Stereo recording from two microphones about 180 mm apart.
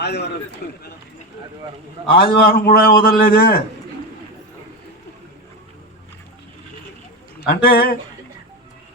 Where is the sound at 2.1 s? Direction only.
55° left (ahead or behind).